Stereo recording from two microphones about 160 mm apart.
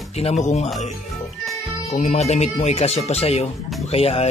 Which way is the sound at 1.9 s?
45° left (ahead or behind).